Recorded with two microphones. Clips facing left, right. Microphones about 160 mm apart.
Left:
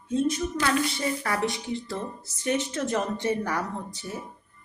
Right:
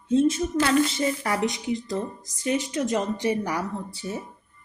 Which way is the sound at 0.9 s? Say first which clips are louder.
Right 3 dB; 20° right (ahead or behind).